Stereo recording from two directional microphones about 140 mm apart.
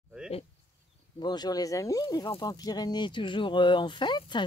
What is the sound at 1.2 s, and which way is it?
Speech, 30° left (ahead or behind).